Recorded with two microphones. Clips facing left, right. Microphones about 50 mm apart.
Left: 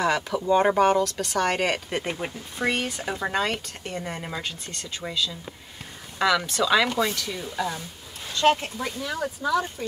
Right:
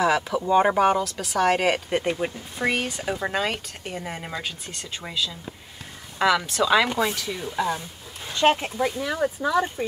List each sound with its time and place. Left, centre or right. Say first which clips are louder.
0.0 s speech: right 2 dB; centre; by 9.8 s right